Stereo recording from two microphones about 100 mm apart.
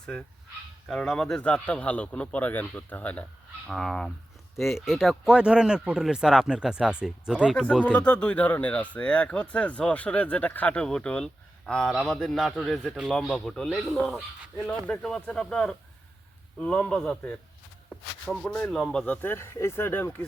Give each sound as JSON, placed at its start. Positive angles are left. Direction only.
{"t": 0.0, "sound": "speech", "side_deg": 10}
{"t": 3.7, "sound": "speech", "side_deg": 5}
{"t": 7.5, "sound": "speech", "side_deg": 5}
{"t": 7.9, "sound": "speech", "side_deg": 15}
{"t": 18.3, "sound": "speech", "side_deg": 5}